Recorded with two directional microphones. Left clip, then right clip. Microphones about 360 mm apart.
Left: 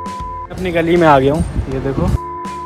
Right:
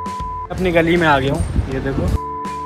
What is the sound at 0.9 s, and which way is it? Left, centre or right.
Speech, left.